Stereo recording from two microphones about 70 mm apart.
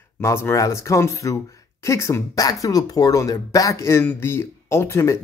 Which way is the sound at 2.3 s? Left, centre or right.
Left.